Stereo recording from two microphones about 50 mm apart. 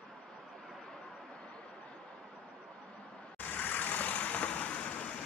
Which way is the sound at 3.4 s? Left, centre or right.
Left.